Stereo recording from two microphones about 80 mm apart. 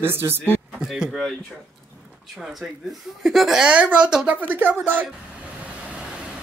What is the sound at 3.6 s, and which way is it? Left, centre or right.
Speech, centre.